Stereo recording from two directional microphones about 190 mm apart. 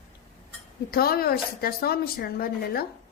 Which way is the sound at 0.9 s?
55° left (ahead or behind).